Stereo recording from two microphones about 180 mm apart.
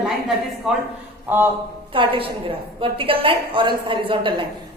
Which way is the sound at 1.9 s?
30° right (ahead or behind).